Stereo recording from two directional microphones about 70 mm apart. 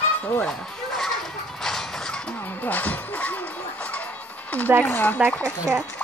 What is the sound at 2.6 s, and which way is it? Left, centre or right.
Music, left.